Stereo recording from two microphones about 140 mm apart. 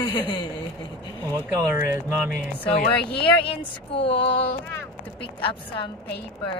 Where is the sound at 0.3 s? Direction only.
35° left (ahead or behind).